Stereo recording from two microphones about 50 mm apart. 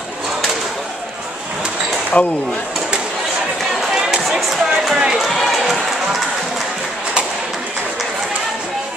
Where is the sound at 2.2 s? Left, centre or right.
Left.